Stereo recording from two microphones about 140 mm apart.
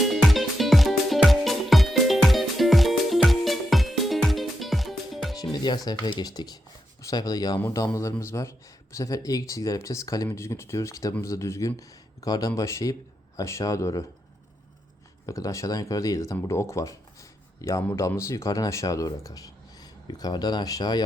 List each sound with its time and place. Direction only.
0.0 s music: centre (ahead or behind)
5.4 s speech: 30° left (ahead or behind)
15.3 s speech: 25° left (ahead or behind)